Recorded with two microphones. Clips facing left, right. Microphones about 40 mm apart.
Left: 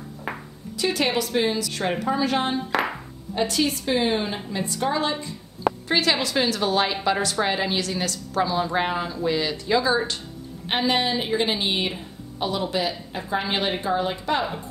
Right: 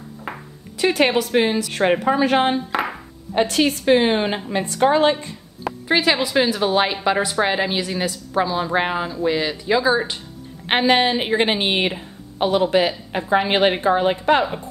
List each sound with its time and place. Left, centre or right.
0.7 s a woman's voice: right
2.7 s clapping: centre
3.3 s a woman's voice: right
5.7 s a woman's voice: centre
10.7 s a woman's voice: right